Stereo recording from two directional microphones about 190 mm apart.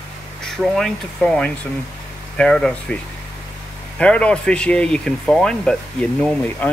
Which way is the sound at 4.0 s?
5° left (ahead or behind).